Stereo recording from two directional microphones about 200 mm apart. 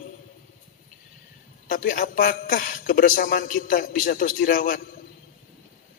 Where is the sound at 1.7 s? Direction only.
45° left (ahead or behind).